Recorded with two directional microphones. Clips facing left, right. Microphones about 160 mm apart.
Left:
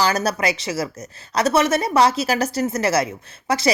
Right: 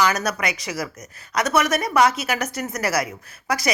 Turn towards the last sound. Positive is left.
turn(degrees=25)  # may be behind; listen again after turning